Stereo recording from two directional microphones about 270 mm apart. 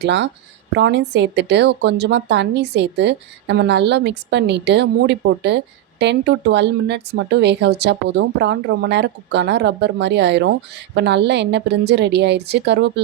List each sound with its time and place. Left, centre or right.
0.0 s a woman's voice: right